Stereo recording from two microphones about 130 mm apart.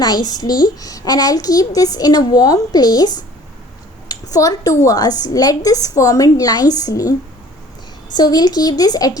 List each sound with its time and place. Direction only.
0.0 s a child's voice: 30° left (ahead or behind)
8.1 s speech: 30° left (ahead or behind)